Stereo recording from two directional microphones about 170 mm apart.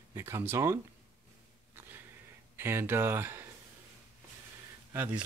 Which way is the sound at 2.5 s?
15° right (ahead or behind).